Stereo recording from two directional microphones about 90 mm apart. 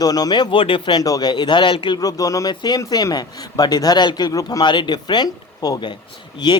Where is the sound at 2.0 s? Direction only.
40° left (ahead or behind).